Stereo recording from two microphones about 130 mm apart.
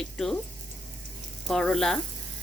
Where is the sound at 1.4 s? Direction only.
5° left (ahead or behind).